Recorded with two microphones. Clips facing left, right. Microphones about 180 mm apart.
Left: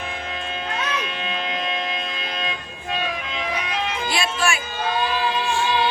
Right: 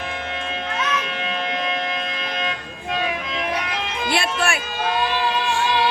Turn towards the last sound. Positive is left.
turn(degrees=-60)  # may be behind; listen again after turning